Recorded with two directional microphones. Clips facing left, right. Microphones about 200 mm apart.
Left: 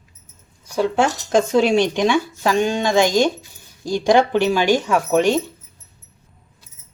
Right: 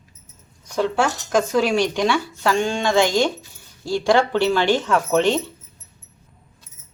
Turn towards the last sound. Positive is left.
turn(degrees=10)  # may be behind; listen again after turning